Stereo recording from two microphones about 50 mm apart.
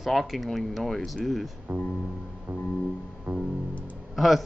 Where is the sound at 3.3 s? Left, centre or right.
Right.